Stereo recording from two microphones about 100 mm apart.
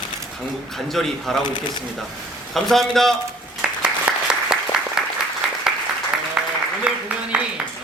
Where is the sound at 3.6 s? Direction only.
10° right (ahead or behind).